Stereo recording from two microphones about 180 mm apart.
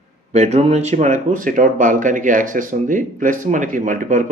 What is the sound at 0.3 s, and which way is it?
Speech, 35° right (ahead or behind).